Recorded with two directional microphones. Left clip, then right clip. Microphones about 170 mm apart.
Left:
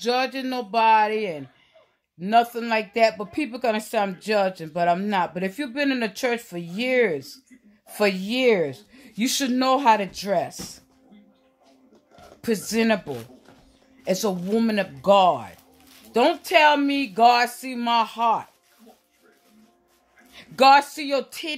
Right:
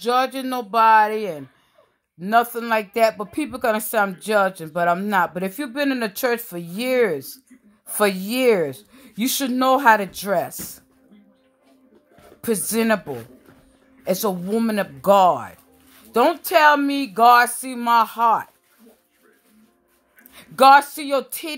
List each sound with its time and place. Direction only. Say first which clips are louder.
0.0 s speech: right 3 dB; 5° left (ahead or behind)
12.4 s speech: right 2 dB; centre (ahead or behind)
13.0 s speech: right 2 dB; 15° right (ahead or behind)
14.0 s speech: right 2 dB; centre (ahead or behind)
15.0 s speech: right 2 dB; 5° right (ahead or behind)
20.3 s speech: right 3 dB; 5° left (ahead or behind)